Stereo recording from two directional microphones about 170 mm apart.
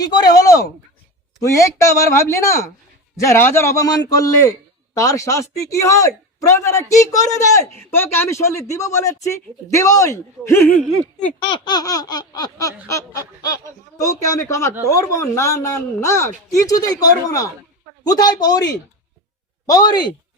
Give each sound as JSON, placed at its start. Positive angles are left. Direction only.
{"t": 0.0, "sound": "laughter", "side_deg": 25}
{"t": 3.2, "sound": "speech", "side_deg": 15}
{"t": 4.9, "sound": "laughter", "side_deg": 20}
{"t": 7.9, "sound": "speech", "side_deg": 15}
{"t": 11.3, "sound": "laughter", "side_deg": 30}
{"t": 14.8, "sound": "speech", "side_deg": 20}
{"t": 18.0, "sound": "laughter", "side_deg": 25}